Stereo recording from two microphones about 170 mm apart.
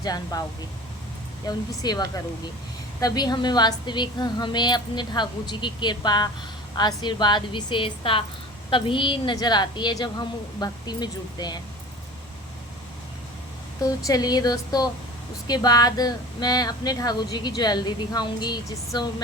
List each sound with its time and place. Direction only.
0.0 s a woman's voice: 20° left (ahead or behind)
1.5 s a woman's voice: 25° left (ahead or behind)
13.8 s a woman's voice: 20° left (ahead or behind)